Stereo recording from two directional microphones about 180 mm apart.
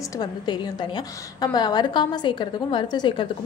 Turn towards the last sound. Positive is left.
turn(degrees=25)  # may be behind; listen again after turning